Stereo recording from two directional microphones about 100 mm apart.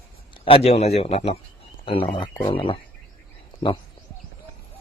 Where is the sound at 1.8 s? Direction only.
60° left (ahead or behind).